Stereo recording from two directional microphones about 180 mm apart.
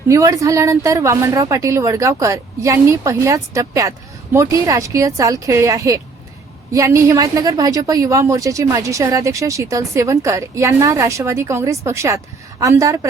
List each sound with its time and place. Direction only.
0.1 s a woman's voice: 20° right (ahead or behind)